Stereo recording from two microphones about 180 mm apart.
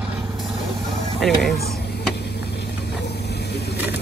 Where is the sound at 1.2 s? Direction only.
Centre (ahead or behind).